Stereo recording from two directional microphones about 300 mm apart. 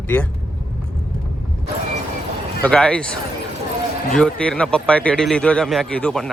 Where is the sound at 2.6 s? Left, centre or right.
Centre.